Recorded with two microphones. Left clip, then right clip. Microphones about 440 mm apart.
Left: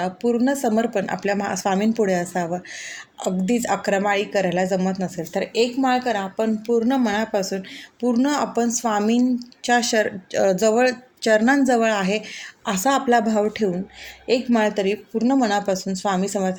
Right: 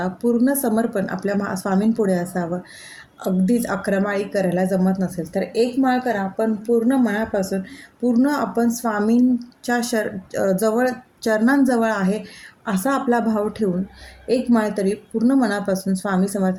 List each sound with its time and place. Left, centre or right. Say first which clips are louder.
0.0 s a woman's voice: right 1 dB; right